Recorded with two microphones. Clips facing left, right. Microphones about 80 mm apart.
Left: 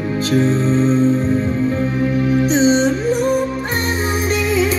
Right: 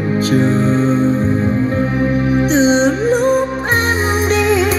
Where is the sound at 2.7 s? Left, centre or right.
Right.